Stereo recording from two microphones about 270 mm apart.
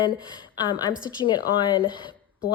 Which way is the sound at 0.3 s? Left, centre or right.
Centre.